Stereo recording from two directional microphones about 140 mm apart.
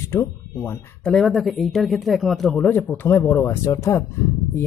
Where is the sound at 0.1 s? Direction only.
20° left (ahead or behind).